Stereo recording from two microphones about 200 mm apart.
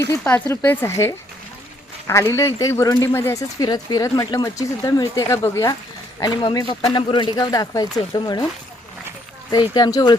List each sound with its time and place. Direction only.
0.1 s a man's voice: 10° left (ahead or behind)
9.5 s a man's voice: 20° left (ahead or behind)